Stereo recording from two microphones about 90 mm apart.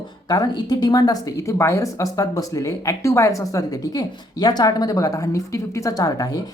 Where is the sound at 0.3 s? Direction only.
45° left (ahead or behind).